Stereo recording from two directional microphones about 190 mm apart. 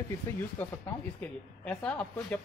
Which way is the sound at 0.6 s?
10° left (ahead or behind).